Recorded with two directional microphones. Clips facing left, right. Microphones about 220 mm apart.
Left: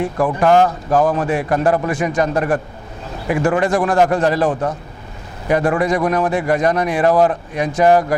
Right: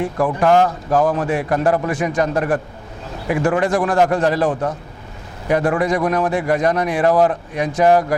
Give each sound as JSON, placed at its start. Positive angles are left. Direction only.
{"t": 0.2, "sound": "a man's voice", "side_deg": 25}